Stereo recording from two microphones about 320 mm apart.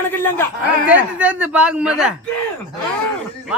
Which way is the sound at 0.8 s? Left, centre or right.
Centre.